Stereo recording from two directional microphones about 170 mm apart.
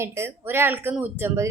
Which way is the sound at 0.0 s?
15° right (ahead or behind).